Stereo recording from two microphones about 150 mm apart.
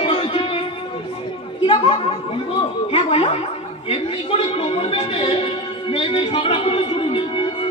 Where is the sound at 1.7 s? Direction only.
40° left (ahead or behind).